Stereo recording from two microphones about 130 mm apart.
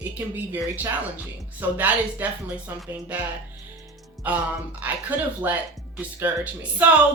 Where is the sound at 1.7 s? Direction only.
15° right (ahead or behind).